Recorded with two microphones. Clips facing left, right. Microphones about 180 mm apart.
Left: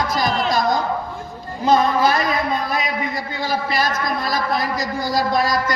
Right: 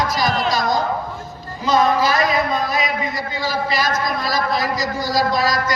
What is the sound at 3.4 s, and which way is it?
A man's voice, 55° left (ahead or behind).